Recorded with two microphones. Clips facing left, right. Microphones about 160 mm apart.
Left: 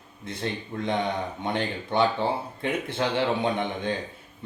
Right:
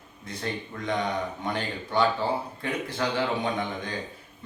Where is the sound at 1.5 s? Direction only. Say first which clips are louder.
Left 3 dB; 25° left (ahead or behind).